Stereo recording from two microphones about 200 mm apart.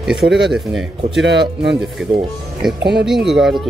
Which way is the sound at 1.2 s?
60° right (ahead or behind).